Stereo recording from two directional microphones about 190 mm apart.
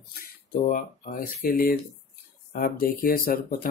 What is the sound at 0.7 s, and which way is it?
Speech, 45° left (ahead or behind).